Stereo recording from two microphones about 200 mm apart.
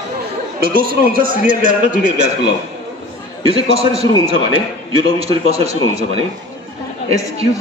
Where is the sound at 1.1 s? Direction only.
40° right (ahead or behind).